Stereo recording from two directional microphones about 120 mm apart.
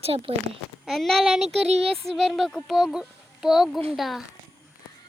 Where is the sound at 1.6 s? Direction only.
65° right (ahead or behind).